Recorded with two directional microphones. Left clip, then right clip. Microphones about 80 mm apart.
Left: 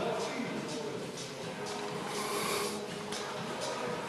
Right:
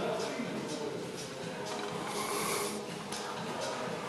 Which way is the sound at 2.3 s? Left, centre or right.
Centre.